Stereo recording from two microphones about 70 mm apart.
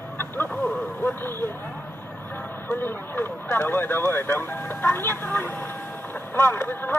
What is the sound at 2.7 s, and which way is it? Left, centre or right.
Speech, left.